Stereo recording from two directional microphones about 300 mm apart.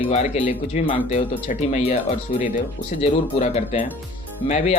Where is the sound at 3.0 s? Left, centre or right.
Left.